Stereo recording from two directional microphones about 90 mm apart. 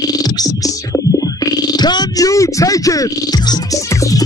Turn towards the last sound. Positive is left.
turn(degrees=35)  # may be behind; listen again after turning